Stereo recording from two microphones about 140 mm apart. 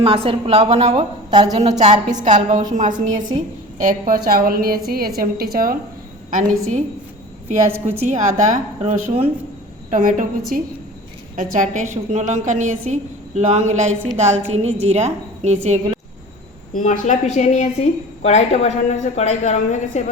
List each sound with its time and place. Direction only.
0.0 s a woman's voice: 40° right (ahead or behind); by 5.7 s 90° right
6.3 s a woman's voice: 60° right (ahead or behind)
7.9 s a woman's voice: 55° right (ahead or behind)
9.9 s a woman's voice: 75° right (ahead or behind); by 16.0 s 50° right (ahead or behind)
16.7 s a woman's voice: 60° left (ahead or behind)